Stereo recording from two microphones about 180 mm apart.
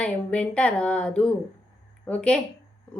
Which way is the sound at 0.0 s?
5° left (ahead or behind).